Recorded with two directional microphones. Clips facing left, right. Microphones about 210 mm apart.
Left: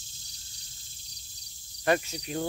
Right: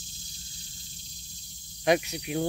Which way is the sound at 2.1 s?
10° right (ahead or behind).